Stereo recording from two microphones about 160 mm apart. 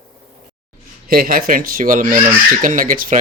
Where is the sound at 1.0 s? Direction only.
65° right (ahead or behind).